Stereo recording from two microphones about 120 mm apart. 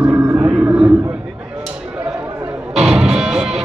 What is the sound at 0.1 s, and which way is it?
Vehicle, 20° right (ahead or behind).